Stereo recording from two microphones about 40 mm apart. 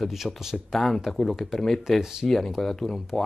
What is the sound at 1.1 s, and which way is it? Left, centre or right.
Speech, centre.